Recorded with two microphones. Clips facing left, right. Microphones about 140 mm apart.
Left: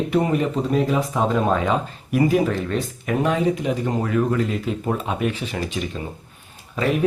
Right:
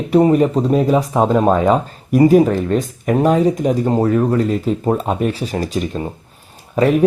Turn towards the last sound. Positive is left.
turn(degrees=-40)  # may be behind; listen again after turning